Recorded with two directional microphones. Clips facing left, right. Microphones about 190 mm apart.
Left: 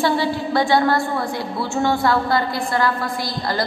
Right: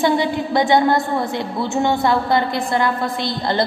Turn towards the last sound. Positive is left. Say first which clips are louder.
# right 3 dB
turn(degrees=-25)  # may be behind; listen again after turning